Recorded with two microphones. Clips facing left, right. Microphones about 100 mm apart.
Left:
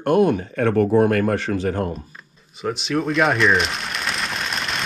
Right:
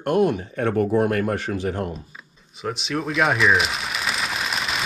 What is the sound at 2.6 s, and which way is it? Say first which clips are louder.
Rain on surface: left 4 dB; centre (ahead or behind).